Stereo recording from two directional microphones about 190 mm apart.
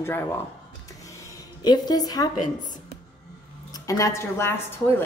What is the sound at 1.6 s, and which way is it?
Speech, 20° left (ahead or behind).